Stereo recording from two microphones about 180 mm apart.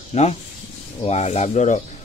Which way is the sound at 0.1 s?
35° left (ahead or behind).